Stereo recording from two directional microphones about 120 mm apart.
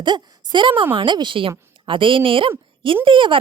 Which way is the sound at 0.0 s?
40° right (ahead or behind).